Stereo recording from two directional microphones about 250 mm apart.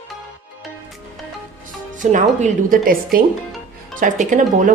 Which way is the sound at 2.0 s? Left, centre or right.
Right.